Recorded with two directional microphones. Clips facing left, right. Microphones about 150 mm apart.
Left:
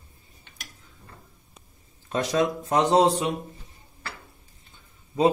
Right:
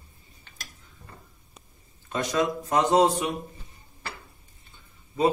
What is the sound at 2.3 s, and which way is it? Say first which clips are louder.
Speech: left 1 dB; 25° left (ahead or behind).